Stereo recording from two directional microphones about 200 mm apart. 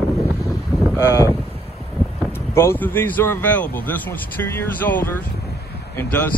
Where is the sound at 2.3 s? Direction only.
10° left (ahead or behind).